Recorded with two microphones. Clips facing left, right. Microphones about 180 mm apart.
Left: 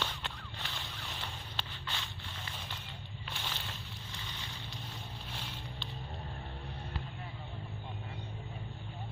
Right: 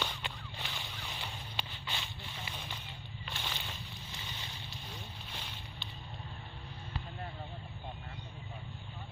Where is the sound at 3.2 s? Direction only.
Centre (ahead or behind).